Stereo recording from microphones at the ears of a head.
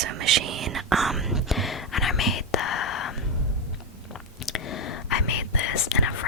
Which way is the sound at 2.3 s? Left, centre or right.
Left.